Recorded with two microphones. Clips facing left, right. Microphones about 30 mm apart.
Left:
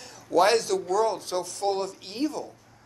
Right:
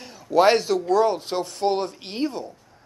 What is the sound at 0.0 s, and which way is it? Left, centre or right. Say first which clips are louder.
A man's voice: right 4 dB; centre.